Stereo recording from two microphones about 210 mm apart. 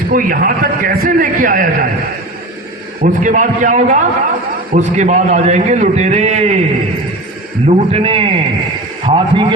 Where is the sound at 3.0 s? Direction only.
35° right (ahead or behind).